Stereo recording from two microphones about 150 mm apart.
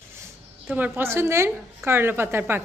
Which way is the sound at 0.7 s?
15° right (ahead or behind).